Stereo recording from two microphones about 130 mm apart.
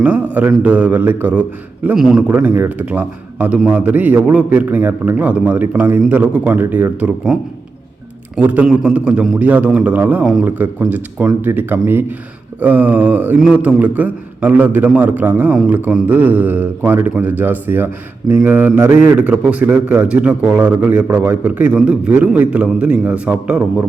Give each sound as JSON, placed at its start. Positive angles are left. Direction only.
{"t": 0.3, "sound": "a man's voice", "side_deg": -10}
{"t": 7.3, "sound": "a man's voice", "side_deg": -5}